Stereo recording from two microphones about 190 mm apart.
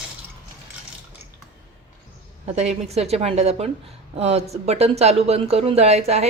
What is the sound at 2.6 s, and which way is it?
Speech, 35° right (ahead or behind).